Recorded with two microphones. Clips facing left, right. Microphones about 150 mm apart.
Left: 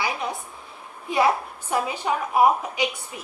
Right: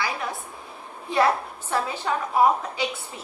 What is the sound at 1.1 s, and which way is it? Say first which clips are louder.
A woman's voice: even; 10° left (ahead or behind).